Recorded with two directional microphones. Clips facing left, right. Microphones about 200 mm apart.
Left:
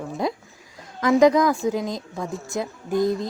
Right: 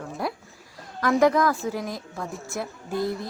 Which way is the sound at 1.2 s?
15° left (ahead or behind).